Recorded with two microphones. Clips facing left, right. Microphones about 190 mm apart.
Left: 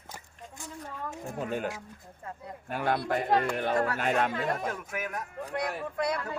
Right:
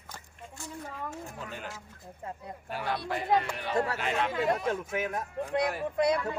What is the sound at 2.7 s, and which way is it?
Speech, 50° left (ahead or behind).